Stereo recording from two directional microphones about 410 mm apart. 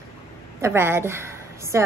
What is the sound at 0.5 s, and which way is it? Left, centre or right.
A woman's voice, centre.